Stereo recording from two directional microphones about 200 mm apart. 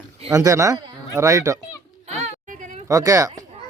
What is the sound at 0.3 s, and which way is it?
Speech, 15° right (ahead or behind).